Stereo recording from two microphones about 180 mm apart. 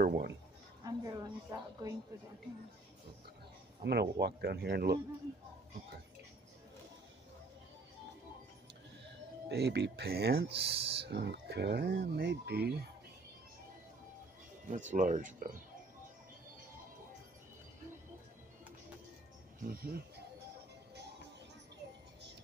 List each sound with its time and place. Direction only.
0.0 s a sound: 50° right (ahead or behind)
0.8 s a woman's voice: 20° right (ahead or behind)
3.8 s speech: 65° right (ahead or behind)
9.0 s speech: 65° right (ahead or behind)
14.7 s speech: 45° right (ahead or behind)
19.7 s speech: 60° right (ahead or behind)